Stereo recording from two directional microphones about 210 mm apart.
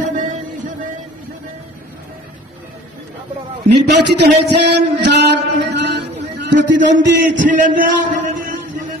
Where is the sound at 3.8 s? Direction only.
50° right (ahead or behind).